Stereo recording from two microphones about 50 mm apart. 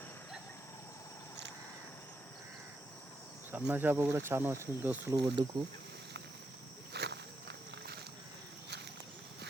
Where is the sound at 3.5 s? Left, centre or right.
Right.